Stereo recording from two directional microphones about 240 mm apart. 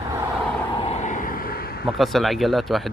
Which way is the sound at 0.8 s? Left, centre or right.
Left.